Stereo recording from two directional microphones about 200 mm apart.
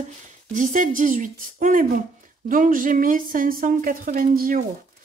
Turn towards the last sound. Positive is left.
turn(degrees=-45)  # may be behind; listen again after turning